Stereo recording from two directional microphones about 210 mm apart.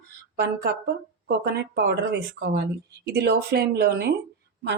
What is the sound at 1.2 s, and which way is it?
Speech, 55° right (ahead or behind).